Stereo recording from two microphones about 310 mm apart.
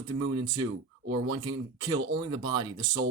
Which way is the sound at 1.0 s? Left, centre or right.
Right.